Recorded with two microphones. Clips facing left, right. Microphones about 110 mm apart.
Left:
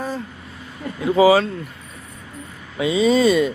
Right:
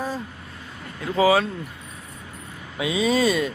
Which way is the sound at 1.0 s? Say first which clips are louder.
Left 5 dB; 10° left (ahead or behind).